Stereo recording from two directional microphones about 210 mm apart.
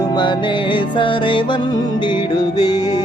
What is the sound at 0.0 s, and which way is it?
Music, 20° left (ahead or behind).